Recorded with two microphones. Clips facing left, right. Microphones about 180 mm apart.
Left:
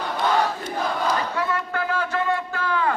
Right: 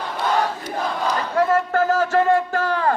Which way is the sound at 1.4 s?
45° right (ahead or behind).